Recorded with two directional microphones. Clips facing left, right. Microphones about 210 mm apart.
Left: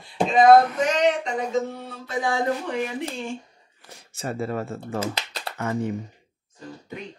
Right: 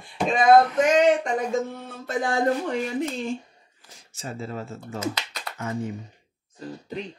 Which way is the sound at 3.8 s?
60° left (ahead or behind).